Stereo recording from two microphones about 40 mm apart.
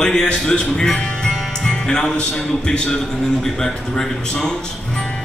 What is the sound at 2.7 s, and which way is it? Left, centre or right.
A man's voice, left.